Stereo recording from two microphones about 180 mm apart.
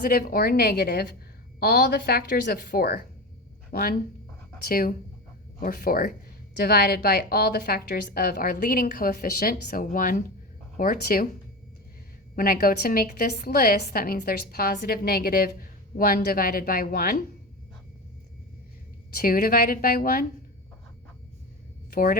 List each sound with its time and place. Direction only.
0.0 s a woman's voice: 50° left (ahead or behind)
12.4 s a woman's voice: 55° left (ahead or behind)
19.1 s a woman's voice: 55° left (ahead or behind)
21.8 s a sound: 55° left (ahead or behind)